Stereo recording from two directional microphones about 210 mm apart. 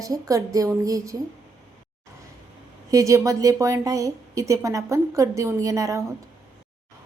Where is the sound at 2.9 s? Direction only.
15° right (ahead or behind).